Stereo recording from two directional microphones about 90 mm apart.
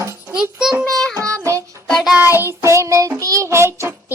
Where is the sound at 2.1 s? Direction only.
25° right (ahead or behind).